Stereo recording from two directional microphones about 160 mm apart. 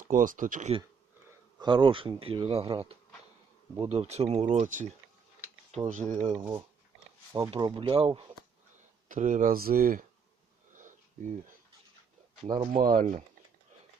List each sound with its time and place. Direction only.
0.1 s speech: 55° right (ahead or behind)
1.5 s speech: 30° right (ahead or behind)
4.6 s speech: 50° right (ahead or behind)
7.5 s speech: 30° right (ahead or behind)
9.0 s speech: 55° right (ahead or behind)
10.8 s sniff: 55° right (ahead or behind)
12.7 s speech: 60° right (ahead or behind)